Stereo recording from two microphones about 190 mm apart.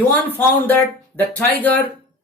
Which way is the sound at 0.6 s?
10° left (ahead or behind).